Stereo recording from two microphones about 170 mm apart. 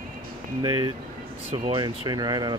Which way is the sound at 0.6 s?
25° right (ahead or behind).